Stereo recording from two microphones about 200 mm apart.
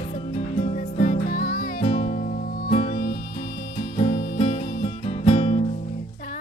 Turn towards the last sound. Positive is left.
turn(degrees=30)  # may be behind; listen again after turning